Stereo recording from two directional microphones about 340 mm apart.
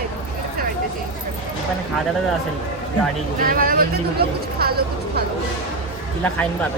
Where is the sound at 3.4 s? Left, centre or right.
Right.